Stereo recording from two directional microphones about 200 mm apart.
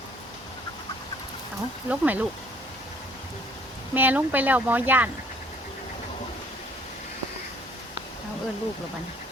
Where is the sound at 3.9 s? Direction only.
10° right (ahead or behind).